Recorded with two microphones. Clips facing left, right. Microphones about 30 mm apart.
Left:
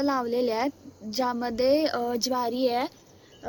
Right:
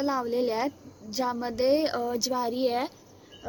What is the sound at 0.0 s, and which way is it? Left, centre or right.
A woman's voice, left.